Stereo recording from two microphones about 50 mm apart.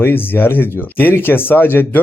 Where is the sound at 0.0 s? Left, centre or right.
Left.